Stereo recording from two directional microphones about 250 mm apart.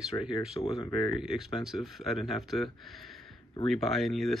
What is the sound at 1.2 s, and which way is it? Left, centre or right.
Speech, centre.